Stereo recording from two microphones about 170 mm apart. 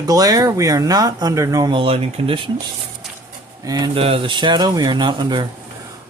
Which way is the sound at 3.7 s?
25° right (ahead or behind).